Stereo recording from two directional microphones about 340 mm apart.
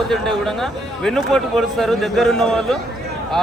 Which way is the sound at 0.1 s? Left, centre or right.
Centre.